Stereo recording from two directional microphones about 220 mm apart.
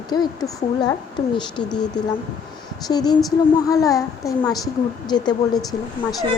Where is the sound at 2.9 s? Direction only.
20° left (ahead or behind).